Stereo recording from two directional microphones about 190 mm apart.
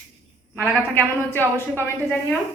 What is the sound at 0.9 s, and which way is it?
Speech, 10° left (ahead or behind).